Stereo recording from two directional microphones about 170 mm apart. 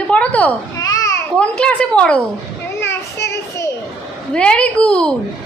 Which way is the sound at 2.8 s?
15° left (ahead or behind).